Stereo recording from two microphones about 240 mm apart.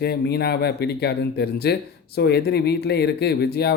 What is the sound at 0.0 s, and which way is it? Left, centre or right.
Speech, left.